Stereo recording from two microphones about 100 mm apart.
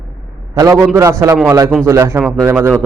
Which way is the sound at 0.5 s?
30° right (ahead or behind).